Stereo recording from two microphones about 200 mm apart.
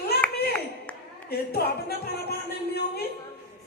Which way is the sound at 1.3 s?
50° left (ahead or behind).